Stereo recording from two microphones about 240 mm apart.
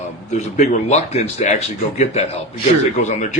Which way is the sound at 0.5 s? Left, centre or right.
Left.